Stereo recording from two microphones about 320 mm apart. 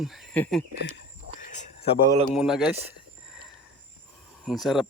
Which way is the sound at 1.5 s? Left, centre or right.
Left.